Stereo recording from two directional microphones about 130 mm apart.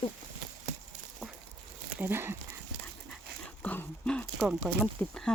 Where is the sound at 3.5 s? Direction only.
15° left (ahead or behind).